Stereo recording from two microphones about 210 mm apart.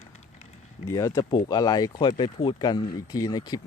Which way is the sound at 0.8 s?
15° left (ahead or behind).